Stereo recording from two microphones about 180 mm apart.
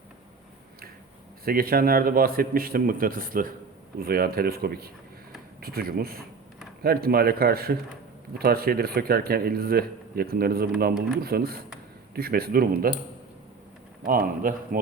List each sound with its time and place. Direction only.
1.5 s speech: 55° right (ahead or behind)
14.1 s a man's voice: 50° right (ahead or behind)